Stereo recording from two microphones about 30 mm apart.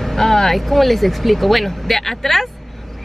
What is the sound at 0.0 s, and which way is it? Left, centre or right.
Speech, centre.